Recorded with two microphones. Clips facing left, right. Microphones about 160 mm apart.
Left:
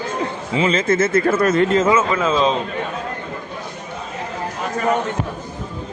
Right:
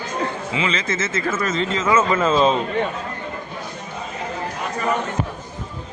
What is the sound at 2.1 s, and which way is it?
Speech, centre (ahead or behind).